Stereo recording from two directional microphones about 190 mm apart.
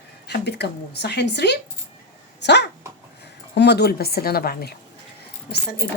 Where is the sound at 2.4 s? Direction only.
65° left (ahead or behind).